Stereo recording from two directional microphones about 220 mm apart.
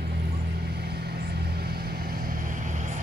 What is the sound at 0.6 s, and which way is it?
Vehicle, 45° right (ahead or behind).